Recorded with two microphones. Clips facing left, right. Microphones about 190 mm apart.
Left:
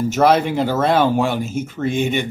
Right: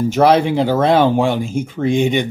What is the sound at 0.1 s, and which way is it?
Speech, 15° right (ahead or behind).